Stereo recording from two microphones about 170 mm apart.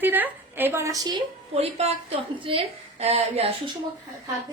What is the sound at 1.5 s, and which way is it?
A woman's voice, 35° right (ahead or behind).